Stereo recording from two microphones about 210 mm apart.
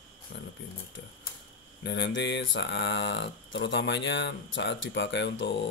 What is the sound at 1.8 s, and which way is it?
Speech, 55° left (ahead or behind).